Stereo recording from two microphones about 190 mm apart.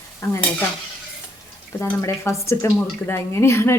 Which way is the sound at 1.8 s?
15° left (ahead or behind).